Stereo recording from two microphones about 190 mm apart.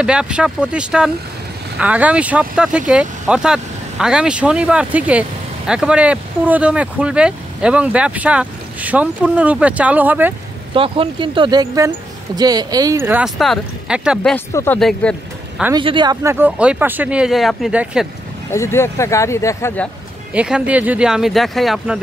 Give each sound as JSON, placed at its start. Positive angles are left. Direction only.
{"t": 0.0, "sound": "speech", "side_deg": -5}
{"t": 10.7, "sound": "speech", "side_deg": -25}
{"t": 14.3, "sound": "speech", "side_deg": 10}
{"t": 15.7, "sound": "speech", "side_deg": -25}
{"t": 18.5, "sound": "speech", "side_deg": 15}
{"t": 20.3, "sound": "speech", "side_deg": -5}